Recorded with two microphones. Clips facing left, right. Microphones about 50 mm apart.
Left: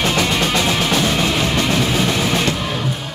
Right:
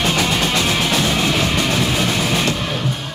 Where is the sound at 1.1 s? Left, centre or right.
Centre.